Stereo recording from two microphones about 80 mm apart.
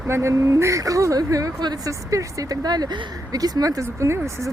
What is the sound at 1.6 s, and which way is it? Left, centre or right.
Speech, right.